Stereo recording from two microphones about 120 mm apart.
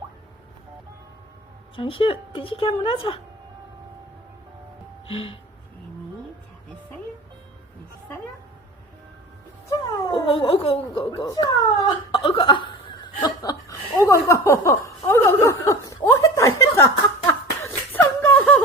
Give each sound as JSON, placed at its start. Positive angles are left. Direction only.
{"t": 1.7, "sound": "a woman's voice", "side_deg": 50}
{"t": 5.0, "sound": "a woman's voice", "side_deg": 50}
{"t": 10.1, "sound": "speech", "side_deg": 45}
{"t": 11.3, "sound": "speech", "side_deg": 35}
{"t": 12.1, "sound": "a woman's voice", "side_deg": 45}
{"t": 13.2, "sound": "chuckle", "side_deg": 30}